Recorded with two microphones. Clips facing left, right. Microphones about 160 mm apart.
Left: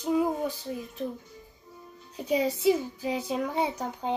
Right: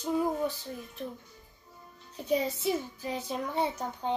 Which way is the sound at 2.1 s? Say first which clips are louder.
Left 2 dB; 15° left (ahead or behind).